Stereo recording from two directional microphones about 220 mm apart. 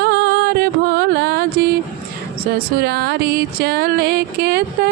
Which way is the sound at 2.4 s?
45° right (ahead or behind).